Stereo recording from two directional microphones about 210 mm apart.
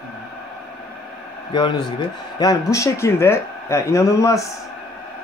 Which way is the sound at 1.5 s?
20° left (ahead or behind).